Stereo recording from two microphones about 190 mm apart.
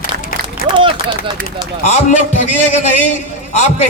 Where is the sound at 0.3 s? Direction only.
50° left (ahead or behind).